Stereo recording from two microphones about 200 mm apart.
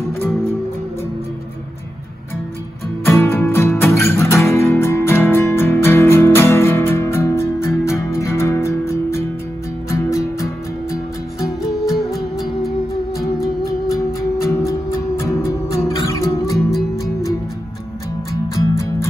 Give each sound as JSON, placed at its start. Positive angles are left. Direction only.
{"t": 3.1, "sound": "music", "side_deg": 10}
{"t": 11.8, "sound": "music", "side_deg": 0}
{"t": 13.2, "sound": "music", "side_deg": 0}
{"t": 14.4, "sound": "music", "side_deg": 15}
{"t": 18.5, "sound": "music", "side_deg": 15}